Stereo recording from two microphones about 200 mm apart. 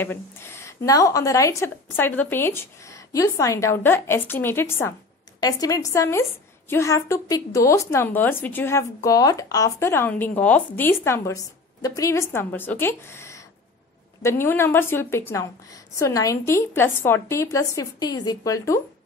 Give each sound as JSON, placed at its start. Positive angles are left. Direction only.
{"t": 0.0, "sound": "a woman's voice", "side_deg": 10}